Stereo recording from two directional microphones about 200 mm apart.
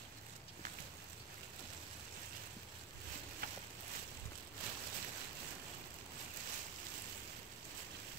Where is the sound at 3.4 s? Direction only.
50° right (ahead or behind).